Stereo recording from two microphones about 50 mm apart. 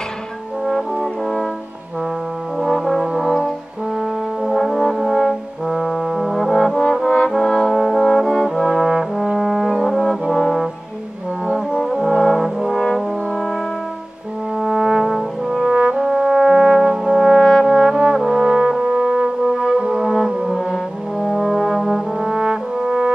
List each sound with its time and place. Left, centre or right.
0.7 s brass instrument: centre
2.6 s brass instrument: centre
11.4 s music: centre
11.8 s brass instrument: centre
14.6 s brass instrument: centre
15.7 s brass instrument: centre